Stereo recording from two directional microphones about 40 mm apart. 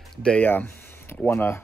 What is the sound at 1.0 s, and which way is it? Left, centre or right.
Speech, left.